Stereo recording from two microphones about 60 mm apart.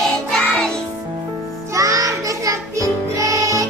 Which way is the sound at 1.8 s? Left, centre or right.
Right.